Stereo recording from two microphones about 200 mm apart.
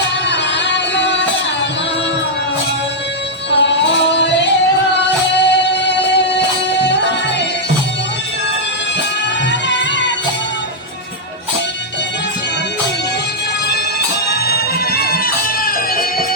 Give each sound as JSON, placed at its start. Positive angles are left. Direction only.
{"t": 0.3, "sound": "music", "side_deg": 60}
{"t": 3.5, "sound": "music", "side_deg": 60}
{"t": 9.5, "sound": "music", "side_deg": 60}
{"t": 14.3, "sound": "music", "side_deg": 50}